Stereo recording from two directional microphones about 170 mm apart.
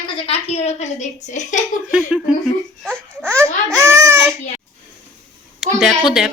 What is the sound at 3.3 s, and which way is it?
Babbling, 15° right (ahead or behind).